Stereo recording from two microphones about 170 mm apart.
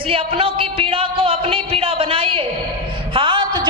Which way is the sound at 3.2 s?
30° right (ahead or behind).